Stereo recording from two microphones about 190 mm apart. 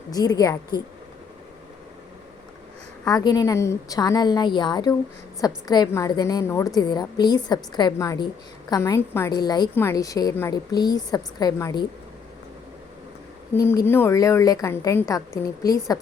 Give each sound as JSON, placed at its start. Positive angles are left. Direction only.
{"t": 0.1, "sound": "a woman's voice", "side_deg": 20}
{"t": 3.0, "sound": "a woman's voice", "side_deg": 20}
{"t": 13.7, "sound": "a woman's voice", "side_deg": 10}